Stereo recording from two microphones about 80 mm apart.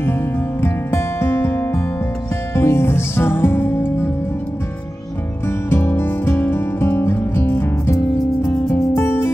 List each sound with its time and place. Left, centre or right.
0.0 s music: left
5.7 s music: left
8.6 s music: left